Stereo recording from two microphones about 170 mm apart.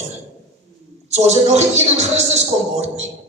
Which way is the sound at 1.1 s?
40° right (ahead or behind).